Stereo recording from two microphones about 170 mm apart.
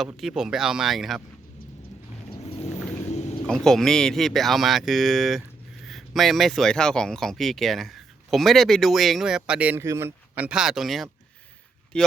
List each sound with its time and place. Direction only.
0.0 s speech: centre (ahead or behind)
2.3 s a sound: 35° left (ahead or behind)
3.4 s speech: 5° left (ahead or behind)